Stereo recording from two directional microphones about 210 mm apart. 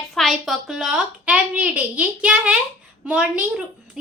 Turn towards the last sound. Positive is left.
turn(degrees=-5)  # may be behind; listen again after turning